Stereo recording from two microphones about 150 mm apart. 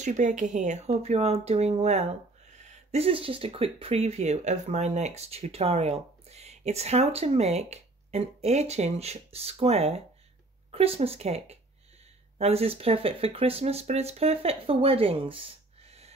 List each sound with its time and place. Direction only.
0.0 s speech: 55° right (ahead or behind)